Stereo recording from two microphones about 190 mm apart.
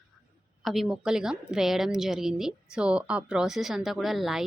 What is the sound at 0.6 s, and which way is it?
A woman's voice, centre (ahead or behind).